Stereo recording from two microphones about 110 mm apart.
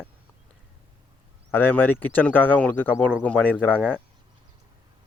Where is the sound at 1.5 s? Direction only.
15° left (ahead or behind).